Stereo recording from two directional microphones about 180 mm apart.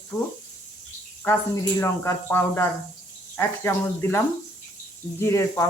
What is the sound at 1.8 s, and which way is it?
Speech, 15° left (ahead or behind).